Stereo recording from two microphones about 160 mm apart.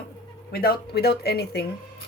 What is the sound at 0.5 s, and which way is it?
Speech, 70° left (ahead or behind).